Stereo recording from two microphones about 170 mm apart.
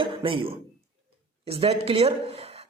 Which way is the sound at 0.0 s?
30° right (ahead or behind).